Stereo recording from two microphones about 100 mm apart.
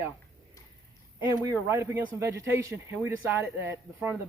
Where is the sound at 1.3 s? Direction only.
25° right (ahead or behind).